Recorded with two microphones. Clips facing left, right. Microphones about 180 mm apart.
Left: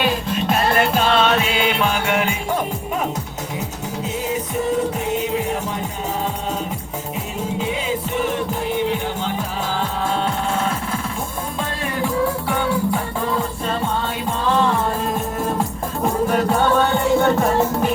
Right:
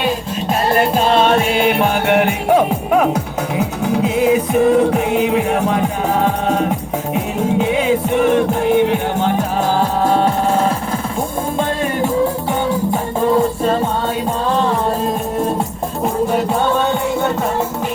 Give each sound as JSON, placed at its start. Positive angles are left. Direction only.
{"t": 0.7, "sound": "music", "side_deg": -35}